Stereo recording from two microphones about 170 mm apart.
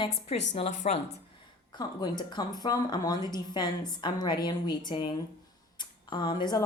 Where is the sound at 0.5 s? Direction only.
40° left (ahead or behind).